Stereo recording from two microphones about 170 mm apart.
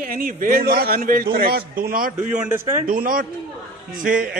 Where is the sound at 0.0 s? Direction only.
60° right (ahead or behind).